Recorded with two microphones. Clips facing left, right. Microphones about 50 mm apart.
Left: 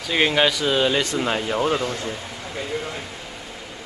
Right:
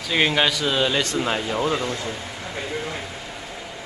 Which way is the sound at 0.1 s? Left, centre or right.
Centre.